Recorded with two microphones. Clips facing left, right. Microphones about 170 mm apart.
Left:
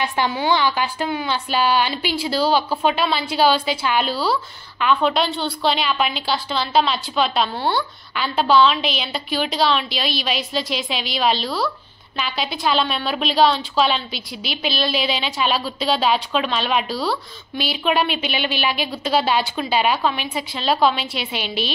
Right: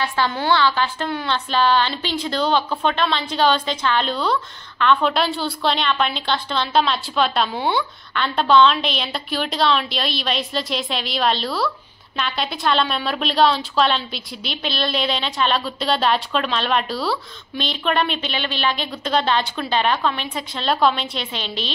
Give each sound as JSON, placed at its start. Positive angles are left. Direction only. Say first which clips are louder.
{"t": 0.0, "sound": "a woman's voice", "louder": "left 1 dB", "side_deg": 15}